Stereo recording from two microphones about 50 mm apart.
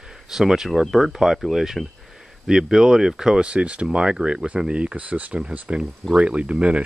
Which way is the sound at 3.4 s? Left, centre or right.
Right.